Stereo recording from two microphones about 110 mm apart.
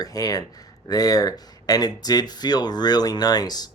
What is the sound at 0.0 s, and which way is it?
Speech, 35° left (ahead or behind).